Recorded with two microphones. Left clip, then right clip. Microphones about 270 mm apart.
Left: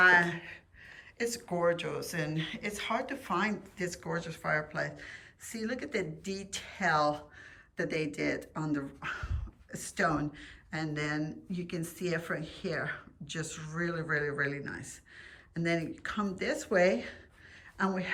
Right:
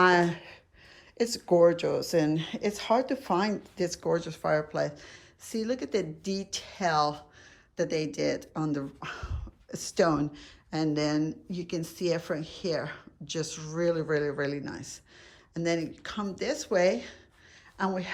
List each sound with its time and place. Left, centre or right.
0.0 s gasp: centre
1.2 s speech: centre